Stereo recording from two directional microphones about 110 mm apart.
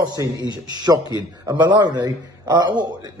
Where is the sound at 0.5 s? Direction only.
40° right (ahead or behind).